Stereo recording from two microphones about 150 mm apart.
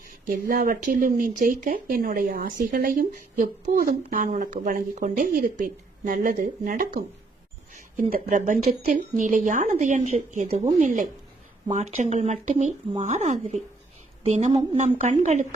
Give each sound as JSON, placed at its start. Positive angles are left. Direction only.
{"t": 0.3, "sound": "speech", "side_deg": -65}
{"t": 8.1, "sound": "speech", "side_deg": -60}